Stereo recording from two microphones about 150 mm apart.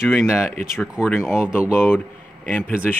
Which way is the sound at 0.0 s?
Centre (ahead or behind).